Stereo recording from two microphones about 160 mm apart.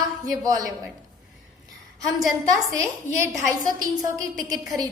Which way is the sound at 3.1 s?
45° left (ahead or behind).